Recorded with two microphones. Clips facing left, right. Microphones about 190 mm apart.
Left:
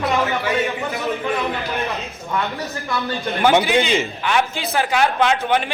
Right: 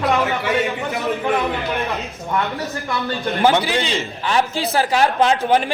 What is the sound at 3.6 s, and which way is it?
A man's voice, 30° right (ahead or behind).